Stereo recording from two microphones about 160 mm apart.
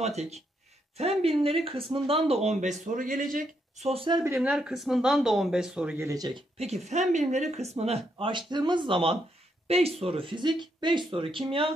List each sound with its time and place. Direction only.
0.0 s speech: 45° right (ahead or behind)
4.4 s speech: 5° right (ahead or behind)
5.9 s speech: 20° right (ahead or behind)
6.6 s speech: 45° right (ahead or behind)